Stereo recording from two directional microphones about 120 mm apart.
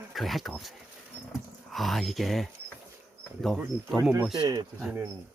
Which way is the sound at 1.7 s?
Centre (ahead or behind).